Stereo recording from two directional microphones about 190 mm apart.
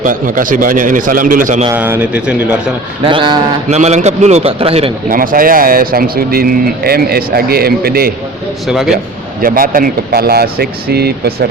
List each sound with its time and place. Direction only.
0.0 s speech: 45° right (ahead or behind)
1.7 s speech: 10° right (ahead or behind)
3.0 s a man's voice: 25° right (ahead or behind)
5.0 s speech: 45° right (ahead or behind)
8.6 s a man's voice: centre (ahead or behind)
9.4 s speech: 50° right (ahead or behind)